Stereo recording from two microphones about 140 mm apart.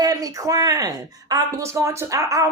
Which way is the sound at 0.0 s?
25° right (ahead or behind).